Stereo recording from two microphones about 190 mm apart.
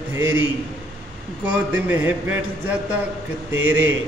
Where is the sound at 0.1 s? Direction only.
10° right (ahead or behind).